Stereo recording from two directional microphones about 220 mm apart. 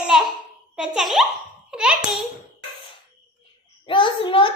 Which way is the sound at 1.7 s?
5° right (ahead or behind).